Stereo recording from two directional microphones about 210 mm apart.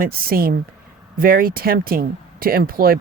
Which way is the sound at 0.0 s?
45° right (ahead or behind).